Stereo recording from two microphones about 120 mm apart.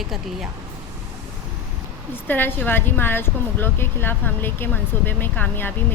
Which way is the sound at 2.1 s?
15° left (ahead or behind).